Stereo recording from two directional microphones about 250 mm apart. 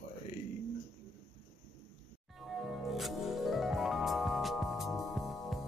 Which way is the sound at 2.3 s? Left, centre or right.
Centre.